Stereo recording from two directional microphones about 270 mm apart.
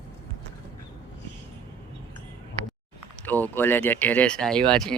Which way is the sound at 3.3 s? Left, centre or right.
Centre.